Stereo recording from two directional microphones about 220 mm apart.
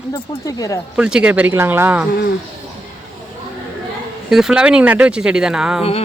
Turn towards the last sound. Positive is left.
turn(degrees=-5)  # may be behind; listen again after turning